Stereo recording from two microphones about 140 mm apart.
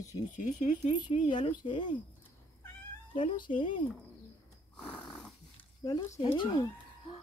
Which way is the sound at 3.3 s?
35° left (ahead or behind).